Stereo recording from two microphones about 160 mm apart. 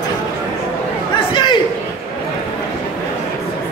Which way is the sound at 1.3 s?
30° left (ahead or behind).